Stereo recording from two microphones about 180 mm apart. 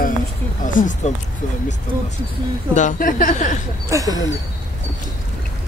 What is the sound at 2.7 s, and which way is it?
Speech, 45° left (ahead or behind).